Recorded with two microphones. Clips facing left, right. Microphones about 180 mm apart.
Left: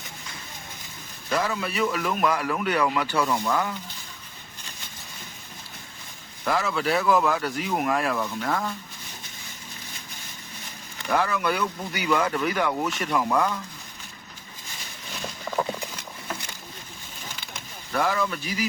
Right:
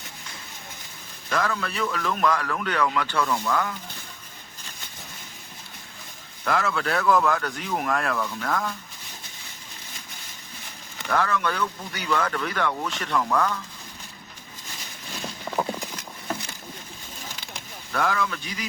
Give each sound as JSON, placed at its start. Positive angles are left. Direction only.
{"t": 1.3, "sound": "a man's voice", "side_deg": 10}
{"t": 6.4, "sound": "speech", "side_deg": 5}
{"t": 11.1, "sound": "a man's voice", "side_deg": 10}
{"t": 17.9, "sound": "speech", "side_deg": 5}